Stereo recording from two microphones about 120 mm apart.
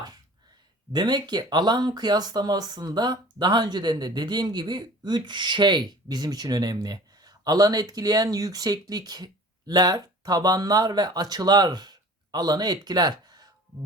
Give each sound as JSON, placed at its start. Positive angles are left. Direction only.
{"t": 0.9, "sound": "speech", "side_deg": -35}